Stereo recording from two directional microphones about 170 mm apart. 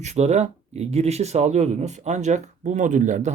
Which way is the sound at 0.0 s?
40° right (ahead or behind).